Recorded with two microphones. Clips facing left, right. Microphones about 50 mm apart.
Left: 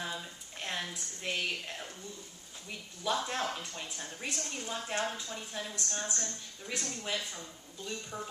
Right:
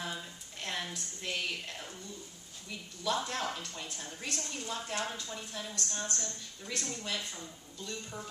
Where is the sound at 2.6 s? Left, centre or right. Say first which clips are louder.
Even; left.